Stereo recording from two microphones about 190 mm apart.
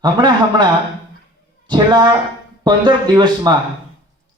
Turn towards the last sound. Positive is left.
turn(degrees=-20)  # may be behind; listen again after turning